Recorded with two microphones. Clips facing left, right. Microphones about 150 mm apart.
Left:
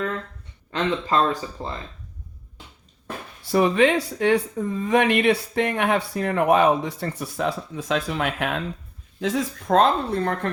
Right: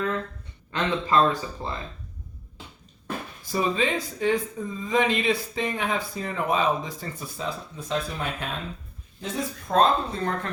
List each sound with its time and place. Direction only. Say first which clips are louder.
0.7 s speech: left 1 dB; 35° left (ahead or behind)
3.4 s speech: left 7 dB; 70° left (ahead or behind)